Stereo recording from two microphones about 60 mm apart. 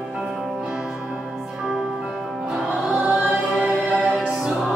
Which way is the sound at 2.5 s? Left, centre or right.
Centre.